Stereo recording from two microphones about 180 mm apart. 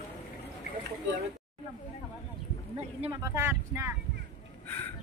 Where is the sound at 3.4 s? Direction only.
15° right (ahead or behind).